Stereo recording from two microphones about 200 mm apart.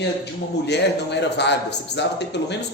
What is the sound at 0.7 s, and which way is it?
Speech, 60° left (ahead or behind).